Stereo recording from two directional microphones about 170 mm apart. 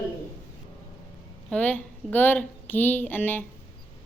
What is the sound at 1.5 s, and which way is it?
A woman's voice, 5° left (ahead or behind).